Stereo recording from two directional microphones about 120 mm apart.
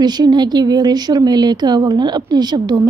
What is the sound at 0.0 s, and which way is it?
Speech, 35° right (ahead or behind).